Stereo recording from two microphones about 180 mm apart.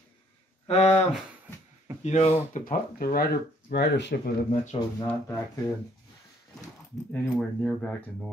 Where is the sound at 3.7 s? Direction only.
70° left (ahead or behind).